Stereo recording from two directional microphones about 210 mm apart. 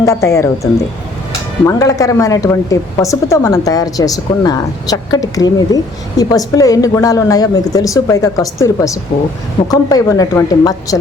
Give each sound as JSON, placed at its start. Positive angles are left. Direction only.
{"t": 0.0, "sound": "a woman's voice", "side_deg": 15}